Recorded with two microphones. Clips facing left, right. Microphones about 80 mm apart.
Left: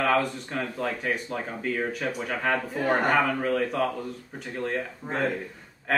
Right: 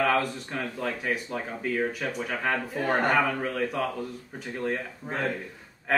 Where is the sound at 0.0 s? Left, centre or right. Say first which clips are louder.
Left 1 dB; centre.